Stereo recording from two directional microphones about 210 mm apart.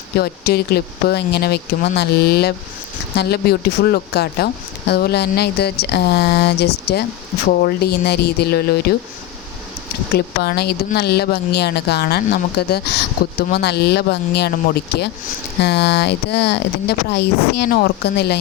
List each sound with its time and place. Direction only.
0.2 s speech: 50° left (ahead or behind)
10.2 s speech: 50° left (ahead or behind)
15.6 s speech: 55° left (ahead or behind)